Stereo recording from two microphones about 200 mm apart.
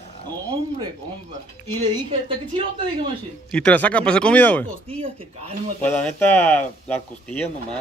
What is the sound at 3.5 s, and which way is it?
Speech, 5° left (ahead or behind).